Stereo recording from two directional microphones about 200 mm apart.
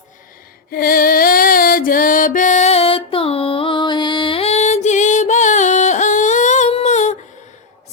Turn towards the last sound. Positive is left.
turn(degrees=35)  # may be behind; listen again after turning